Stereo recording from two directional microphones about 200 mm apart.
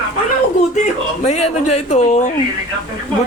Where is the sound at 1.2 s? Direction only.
35° left (ahead or behind).